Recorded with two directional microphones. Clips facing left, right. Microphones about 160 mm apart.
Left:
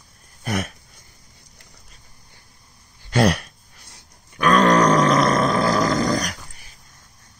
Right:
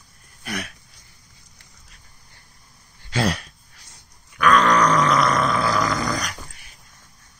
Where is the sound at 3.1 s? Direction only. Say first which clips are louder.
Left 5 dB; 60° left (ahead or behind).